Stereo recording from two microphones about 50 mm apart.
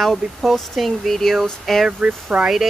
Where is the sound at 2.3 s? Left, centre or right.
Centre.